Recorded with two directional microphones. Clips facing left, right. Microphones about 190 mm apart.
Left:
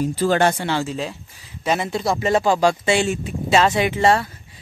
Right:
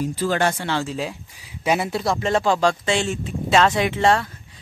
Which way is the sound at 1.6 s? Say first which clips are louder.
Even; 5° right (ahead or behind).